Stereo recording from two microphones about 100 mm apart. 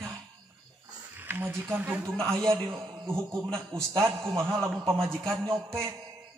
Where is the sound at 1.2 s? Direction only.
20° right (ahead or behind).